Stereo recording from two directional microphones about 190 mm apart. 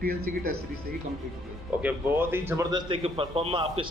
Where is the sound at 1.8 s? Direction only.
10° right (ahead or behind).